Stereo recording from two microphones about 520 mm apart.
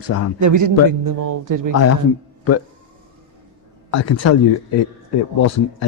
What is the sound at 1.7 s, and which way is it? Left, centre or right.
Speech, left.